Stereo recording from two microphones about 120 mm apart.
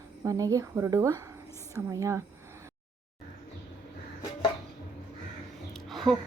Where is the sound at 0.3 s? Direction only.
30° right (ahead or behind).